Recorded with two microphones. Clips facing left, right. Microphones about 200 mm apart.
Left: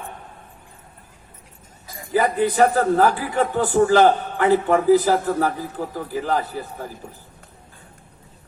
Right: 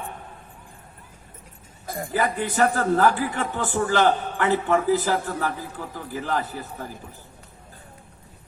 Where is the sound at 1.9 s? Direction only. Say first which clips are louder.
Right 9 dB; 55° right (ahead or behind).